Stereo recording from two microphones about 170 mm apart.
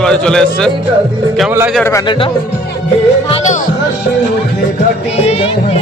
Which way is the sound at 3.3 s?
45° left (ahead or behind).